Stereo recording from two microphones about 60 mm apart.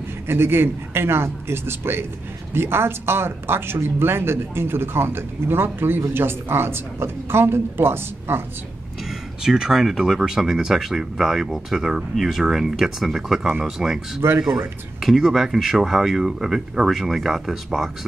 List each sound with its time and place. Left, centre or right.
0.3 s speech: right
9.4 s speech: centre